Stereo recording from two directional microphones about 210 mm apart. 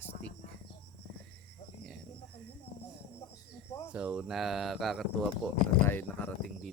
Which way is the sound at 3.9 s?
5° right (ahead or behind).